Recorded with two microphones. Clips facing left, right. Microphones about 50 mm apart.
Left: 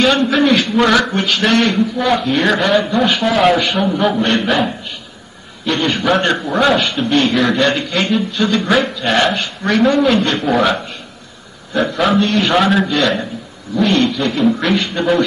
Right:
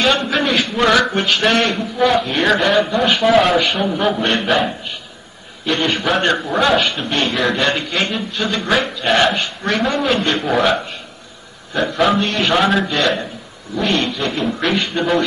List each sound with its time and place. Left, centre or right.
0.0 s a man's voice: centre
5.7 s a man's voice: centre